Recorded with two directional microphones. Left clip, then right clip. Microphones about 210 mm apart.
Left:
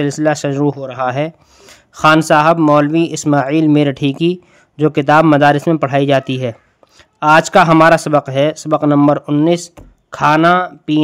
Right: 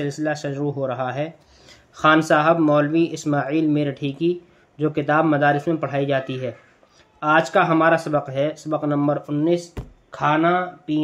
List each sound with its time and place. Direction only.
0.0 s speech: 45° left (ahead or behind)